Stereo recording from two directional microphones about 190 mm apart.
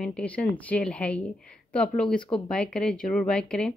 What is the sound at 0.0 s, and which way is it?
Speech, 5° left (ahead or behind).